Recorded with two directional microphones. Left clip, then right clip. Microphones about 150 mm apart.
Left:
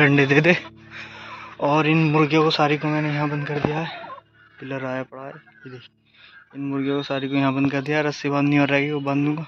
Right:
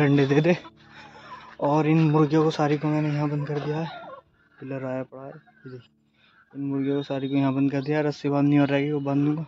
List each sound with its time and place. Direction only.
0.0 s speech: 10° right (ahead or behind)
0.9 s speech: 15° right (ahead or behind)
5.0 s speech: centre (ahead or behind)
6.6 s speech: 10° right (ahead or behind)